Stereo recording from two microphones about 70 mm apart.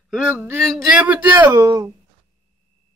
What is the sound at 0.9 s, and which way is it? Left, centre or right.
Speech, right.